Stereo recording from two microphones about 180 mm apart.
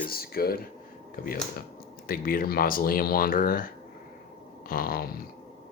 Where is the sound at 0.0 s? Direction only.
55° left (ahead or behind).